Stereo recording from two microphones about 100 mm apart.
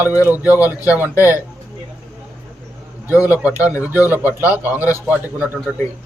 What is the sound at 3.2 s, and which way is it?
A man's voice, 15° right (ahead or behind).